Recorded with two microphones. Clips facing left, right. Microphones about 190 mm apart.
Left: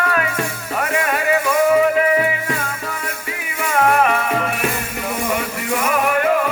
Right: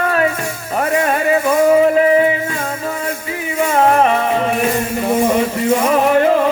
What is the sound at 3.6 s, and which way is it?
Music, 30° right (ahead or behind).